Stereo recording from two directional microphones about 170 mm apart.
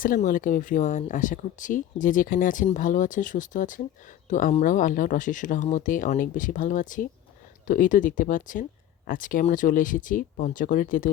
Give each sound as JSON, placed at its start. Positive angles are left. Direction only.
{"t": 0.0, "sound": "speech", "side_deg": 55}